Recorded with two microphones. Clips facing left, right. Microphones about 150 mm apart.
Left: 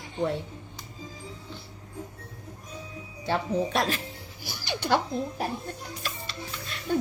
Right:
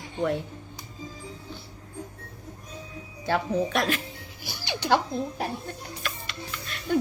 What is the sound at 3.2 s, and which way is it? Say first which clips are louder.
Speech: right 1 dB; 25° left (ahead or behind).